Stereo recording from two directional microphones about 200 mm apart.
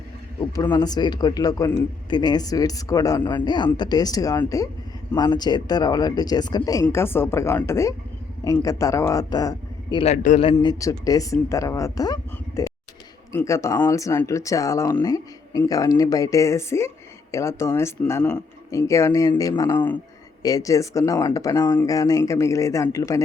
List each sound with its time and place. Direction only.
0.5 s speech: 20° left (ahead or behind)
10.0 s a man's voice: 35° left (ahead or behind)
10.6 s speech: 20° left (ahead or behind)